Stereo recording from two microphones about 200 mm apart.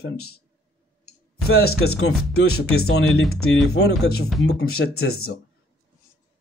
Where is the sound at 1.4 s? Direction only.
90° left.